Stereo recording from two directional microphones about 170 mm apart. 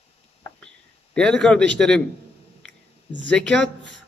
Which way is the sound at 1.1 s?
5° left (ahead or behind).